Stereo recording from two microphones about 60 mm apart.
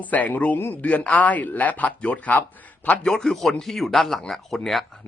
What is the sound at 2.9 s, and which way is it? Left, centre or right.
Speech, centre.